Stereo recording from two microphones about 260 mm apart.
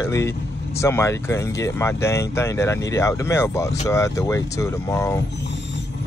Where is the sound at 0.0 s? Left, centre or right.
Centre.